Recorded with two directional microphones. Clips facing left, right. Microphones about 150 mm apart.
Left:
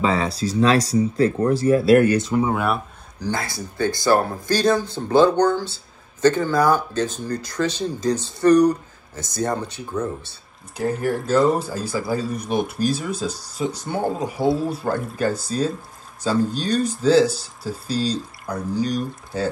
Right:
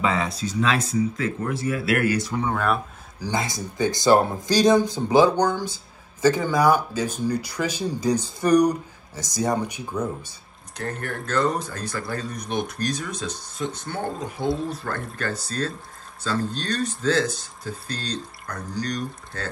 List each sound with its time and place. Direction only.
0.0 s speech: 35° left (ahead or behind)
2.4 s speech: 10° left (ahead or behind)
3.2 s speech: 15° right (ahead or behind)
10.8 s a man's voice: 5° left (ahead or behind)